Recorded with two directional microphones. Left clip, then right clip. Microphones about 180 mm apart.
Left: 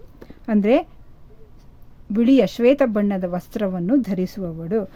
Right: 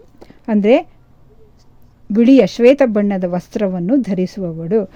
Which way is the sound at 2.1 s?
30° right (ahead or behind).